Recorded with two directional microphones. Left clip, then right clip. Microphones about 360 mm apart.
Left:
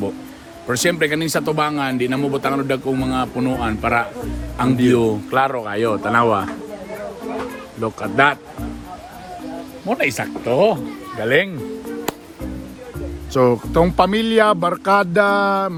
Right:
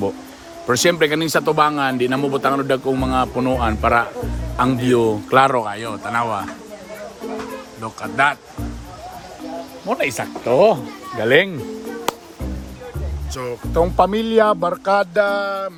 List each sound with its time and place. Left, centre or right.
0.7 s a man's voice: centre
5.3 s speech: right
5.6 s speech: centre
7.8 s speech: centre
9.9 s a man's voice: centre
13.3 s music: centre
14.0 s music: left